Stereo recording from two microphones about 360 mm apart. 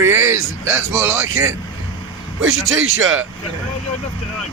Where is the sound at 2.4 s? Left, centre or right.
Right.